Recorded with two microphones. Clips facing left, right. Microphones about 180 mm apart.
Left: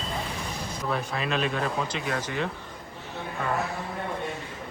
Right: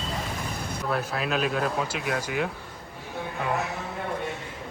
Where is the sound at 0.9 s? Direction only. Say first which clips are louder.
Right 1 dB; centre (ahead or behind).